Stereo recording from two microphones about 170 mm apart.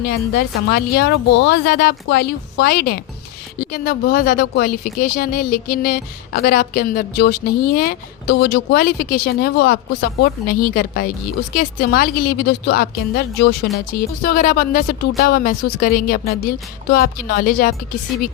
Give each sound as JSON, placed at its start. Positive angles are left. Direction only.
{"t": 0.0, "sound": "speech", "side_deg": 70}
{"t": 18.1, "sound": "speech", "side_deg": 0}